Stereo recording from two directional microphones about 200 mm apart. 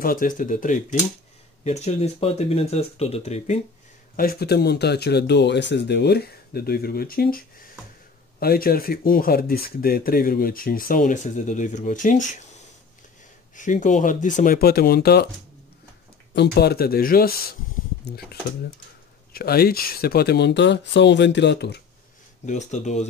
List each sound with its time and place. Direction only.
0.0 s speech: 45° left (ahead or behind)
4.2 s speech: 50° left (ahead or behind)
13.6 s speech: 40° left (ahead or behind)
16.3 s speech: 55° left (ahead or behind)
22.5 s speech: 35° left (ahead or behind)